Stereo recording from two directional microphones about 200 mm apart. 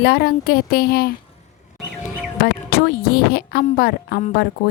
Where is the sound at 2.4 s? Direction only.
50° left (ahead or behind).